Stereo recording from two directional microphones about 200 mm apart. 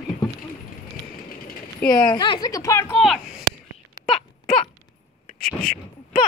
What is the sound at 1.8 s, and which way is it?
Speech, 5° left (ahead or behind).